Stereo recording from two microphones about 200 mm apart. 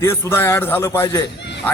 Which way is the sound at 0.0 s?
10° left (ahead or behind).